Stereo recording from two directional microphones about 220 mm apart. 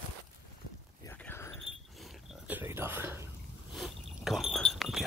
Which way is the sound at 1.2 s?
10° left (ahead or behind).